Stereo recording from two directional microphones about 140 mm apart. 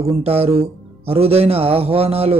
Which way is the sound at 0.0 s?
45° right (ahead or behind).